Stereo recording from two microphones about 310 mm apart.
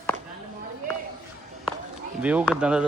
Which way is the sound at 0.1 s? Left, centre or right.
Right.